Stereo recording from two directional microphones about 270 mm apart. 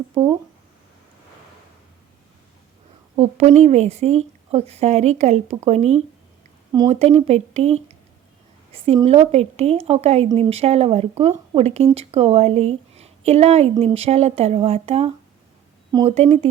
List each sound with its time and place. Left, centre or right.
3.2 s speech: right